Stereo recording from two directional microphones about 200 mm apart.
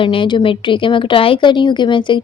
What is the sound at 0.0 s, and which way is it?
Speech, 25° left (ahead or behind).